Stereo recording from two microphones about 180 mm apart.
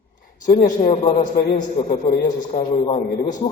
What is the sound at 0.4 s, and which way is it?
Speech, 45° left (ahead or behind).